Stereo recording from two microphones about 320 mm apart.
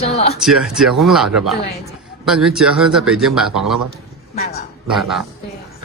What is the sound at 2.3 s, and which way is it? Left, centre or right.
Speech, centre.